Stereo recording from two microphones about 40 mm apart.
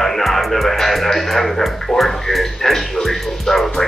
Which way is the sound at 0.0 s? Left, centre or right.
Centre.